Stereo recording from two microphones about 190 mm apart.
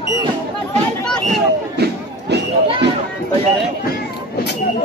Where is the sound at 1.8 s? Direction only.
60° right (ahead or behind).